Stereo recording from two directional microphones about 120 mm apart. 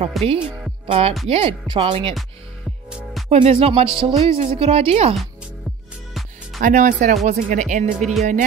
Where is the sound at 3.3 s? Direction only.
60° right (ahead or behind).